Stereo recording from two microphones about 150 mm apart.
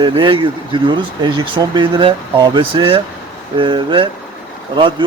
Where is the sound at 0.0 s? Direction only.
35° right (ahead or behind).